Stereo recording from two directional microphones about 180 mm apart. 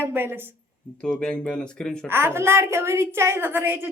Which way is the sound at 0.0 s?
15° right (ahead or behind).